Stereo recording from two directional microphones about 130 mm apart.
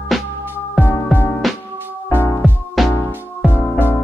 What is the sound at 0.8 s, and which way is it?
Music, 15° left (ahead or behind).